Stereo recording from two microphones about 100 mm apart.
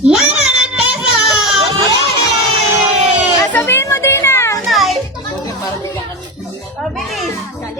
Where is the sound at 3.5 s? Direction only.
25° left (ahead or behind).